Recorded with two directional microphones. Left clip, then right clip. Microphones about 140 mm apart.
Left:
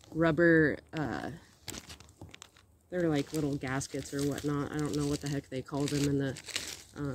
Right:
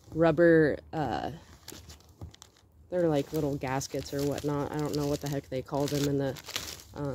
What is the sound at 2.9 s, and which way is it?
Speech, 30° left (ahead or behind).